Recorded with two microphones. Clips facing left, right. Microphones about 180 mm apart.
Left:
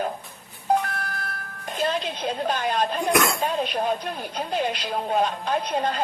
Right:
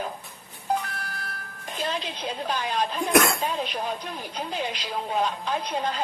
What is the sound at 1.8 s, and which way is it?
A woman's voice, 50° left (ahead or behind).